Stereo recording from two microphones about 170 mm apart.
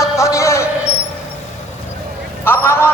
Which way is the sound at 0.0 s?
20° left (ahead or behind).